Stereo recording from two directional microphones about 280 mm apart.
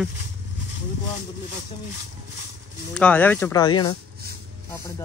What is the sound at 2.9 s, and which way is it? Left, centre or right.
Speech, centre.